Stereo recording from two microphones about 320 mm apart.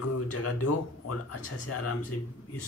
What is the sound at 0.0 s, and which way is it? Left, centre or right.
A man's voice, left.